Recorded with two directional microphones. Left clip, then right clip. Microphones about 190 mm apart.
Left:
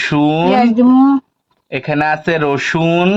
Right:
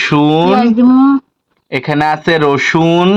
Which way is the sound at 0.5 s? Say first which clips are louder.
Right 1 dB; 15° left (ahead or behind).